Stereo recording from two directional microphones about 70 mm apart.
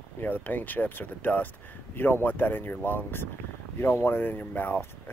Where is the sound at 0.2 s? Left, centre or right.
Left.